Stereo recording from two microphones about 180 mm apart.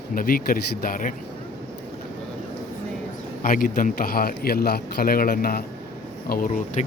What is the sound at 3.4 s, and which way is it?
A man's voice, 50° left (ahead or behind).